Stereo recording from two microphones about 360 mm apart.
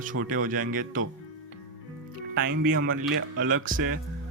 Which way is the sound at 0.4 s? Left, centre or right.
Right.